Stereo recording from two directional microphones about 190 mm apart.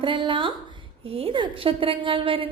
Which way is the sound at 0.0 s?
25° right (ahead or behind).